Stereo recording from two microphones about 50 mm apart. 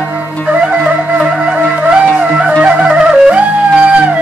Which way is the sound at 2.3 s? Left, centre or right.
Centre.